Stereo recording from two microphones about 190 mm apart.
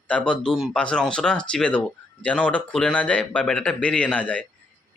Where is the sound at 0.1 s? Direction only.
5° left (ahead or behind).